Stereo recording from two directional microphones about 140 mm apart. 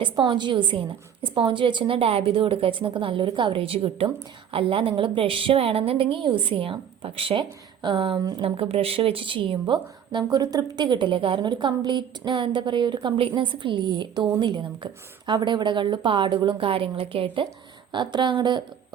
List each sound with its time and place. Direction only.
0.0 s a woman's voice: 35° right (ahead or behind)